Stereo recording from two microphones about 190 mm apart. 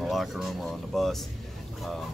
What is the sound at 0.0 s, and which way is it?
Speech, centre (ahead or behind).